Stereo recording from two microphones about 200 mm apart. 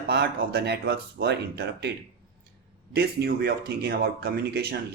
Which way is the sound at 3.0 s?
50° right (ahead or behind).